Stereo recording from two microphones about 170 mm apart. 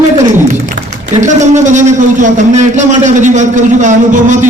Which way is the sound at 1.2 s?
45° right (ahead or behind).